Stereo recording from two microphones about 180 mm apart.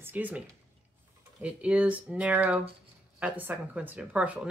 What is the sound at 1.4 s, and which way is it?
Speech, 5° right (ahead or behind).